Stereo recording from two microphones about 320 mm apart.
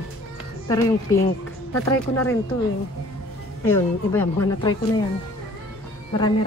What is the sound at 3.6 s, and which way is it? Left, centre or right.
A woman's voice, centre.